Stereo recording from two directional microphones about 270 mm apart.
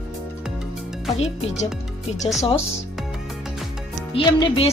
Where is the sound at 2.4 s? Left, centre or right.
Centre.